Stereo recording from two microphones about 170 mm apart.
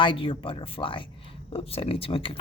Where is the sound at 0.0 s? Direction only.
30° left (ahead or behind).